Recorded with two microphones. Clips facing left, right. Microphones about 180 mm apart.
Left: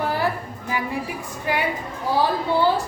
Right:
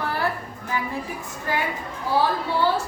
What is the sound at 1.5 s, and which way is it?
Speech, 15° left (ahead or behind).